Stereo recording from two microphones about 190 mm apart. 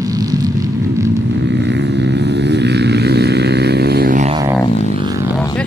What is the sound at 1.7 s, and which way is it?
Vehicle, 70° right (ahead or behind).